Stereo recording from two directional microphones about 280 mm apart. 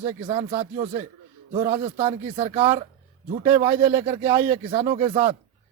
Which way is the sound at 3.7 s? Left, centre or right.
Centre.